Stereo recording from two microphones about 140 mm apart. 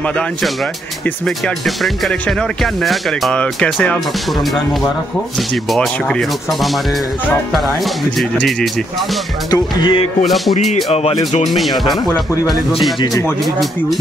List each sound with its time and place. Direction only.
1.8 s speech: 5° left (ahead or behind)
5.7 s speech: 5° left (ahead or behind)
8.2 s speech: 5° left (ahead or behind)
9.5 s music: 30° left (ahead or behind)
10.2 s speech: centre (ahead or behind)
10.9 s speech: 45° left (ahead or behind)
11.4 s speech: centre (ahead or behind)